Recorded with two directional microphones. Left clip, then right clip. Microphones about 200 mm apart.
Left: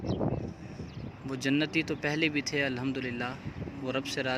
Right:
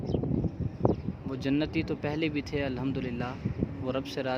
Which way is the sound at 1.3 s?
Centre (ahead or behind).